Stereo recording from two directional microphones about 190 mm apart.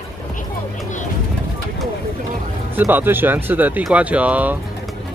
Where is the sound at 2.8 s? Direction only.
10° right (ahead or behind).